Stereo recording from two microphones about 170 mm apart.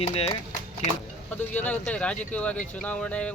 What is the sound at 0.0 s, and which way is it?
Speech, 35° left (ahead or behind).